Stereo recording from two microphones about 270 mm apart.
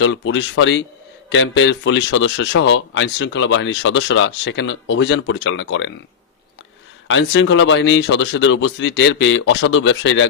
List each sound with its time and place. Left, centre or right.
0.0 s speech: left
7.1 s speech: left